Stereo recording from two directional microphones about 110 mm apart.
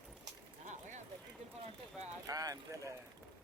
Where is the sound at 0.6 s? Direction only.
90° right.